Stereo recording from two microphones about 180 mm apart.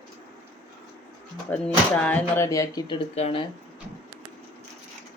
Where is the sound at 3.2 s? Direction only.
35° left (ahead or behind).